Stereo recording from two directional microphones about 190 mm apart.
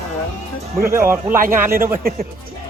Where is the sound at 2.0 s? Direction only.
50° right (ahead or behind).